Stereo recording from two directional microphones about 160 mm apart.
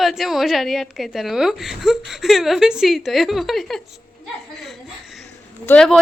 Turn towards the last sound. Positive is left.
turn(degrees=5)  # may be behind; listen again after turning